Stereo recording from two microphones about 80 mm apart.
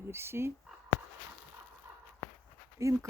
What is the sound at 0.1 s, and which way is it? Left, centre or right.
Speech, right.